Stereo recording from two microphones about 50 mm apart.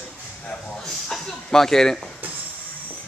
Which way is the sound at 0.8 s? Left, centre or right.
Centre.